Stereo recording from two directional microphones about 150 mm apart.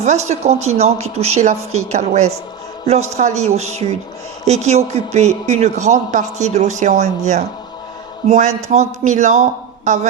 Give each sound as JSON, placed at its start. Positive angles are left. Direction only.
{"t": 0.0, "sound": "a man's voice", "side_deg": -50}